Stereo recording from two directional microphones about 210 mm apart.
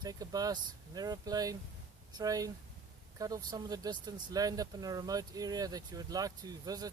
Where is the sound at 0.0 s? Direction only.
15° right (ahead or behind).